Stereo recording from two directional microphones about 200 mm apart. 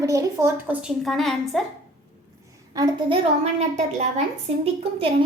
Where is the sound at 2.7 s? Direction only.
20° right (ahead or behind).